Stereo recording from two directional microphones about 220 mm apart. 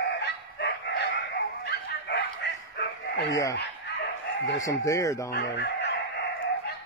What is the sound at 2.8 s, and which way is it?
Chicken, 50° left (ahead or behind).